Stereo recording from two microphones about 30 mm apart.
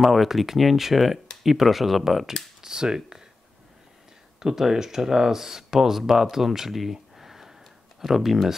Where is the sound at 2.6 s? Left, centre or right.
Right.